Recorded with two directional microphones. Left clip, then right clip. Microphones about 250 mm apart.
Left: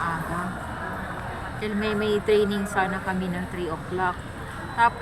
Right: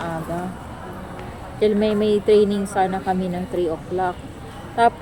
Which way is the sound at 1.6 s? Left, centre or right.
Right.